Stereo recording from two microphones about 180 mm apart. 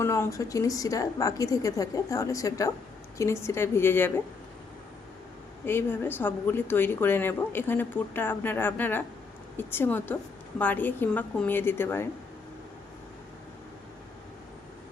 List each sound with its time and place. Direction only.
0.0 s a woman's voice: 15° left (ahead or behind)
5.6 s a woman's voice: 10° left (ahead or behind)